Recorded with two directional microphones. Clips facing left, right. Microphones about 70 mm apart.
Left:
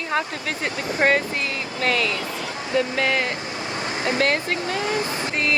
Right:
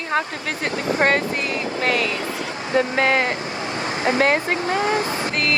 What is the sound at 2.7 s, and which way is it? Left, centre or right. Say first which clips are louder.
Speech: right 3 dB; right.